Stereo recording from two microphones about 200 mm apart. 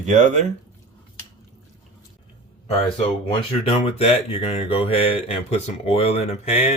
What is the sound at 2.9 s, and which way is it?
Speech, 25° left (ahead or behind).